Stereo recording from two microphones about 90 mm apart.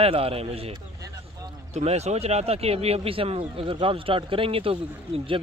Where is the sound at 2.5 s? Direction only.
90° right.